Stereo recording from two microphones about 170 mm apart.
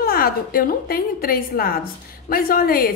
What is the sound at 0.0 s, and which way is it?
A woman's voice, 60° left (ahead or behind).